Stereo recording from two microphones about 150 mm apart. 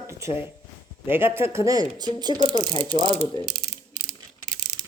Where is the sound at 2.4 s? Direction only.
40° right (ahead or behind).